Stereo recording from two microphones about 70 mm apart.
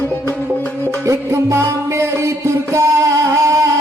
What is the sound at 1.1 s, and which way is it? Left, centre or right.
Music, right.